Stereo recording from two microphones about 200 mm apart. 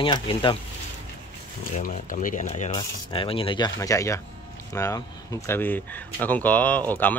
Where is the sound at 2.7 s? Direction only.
25° left (ahead or behind).